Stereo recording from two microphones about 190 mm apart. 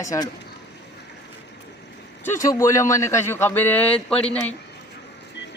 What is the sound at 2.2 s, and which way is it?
A man's voice, 15° left (ahead or behind).